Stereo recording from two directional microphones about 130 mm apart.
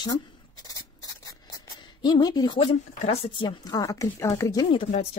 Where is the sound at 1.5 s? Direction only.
35° left (ahead or behind).